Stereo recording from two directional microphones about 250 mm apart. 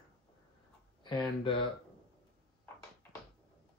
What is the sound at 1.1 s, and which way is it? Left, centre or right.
Speech, centre.